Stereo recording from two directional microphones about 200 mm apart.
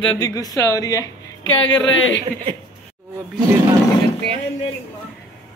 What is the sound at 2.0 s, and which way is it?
Speech, 75° left (ahead or behind).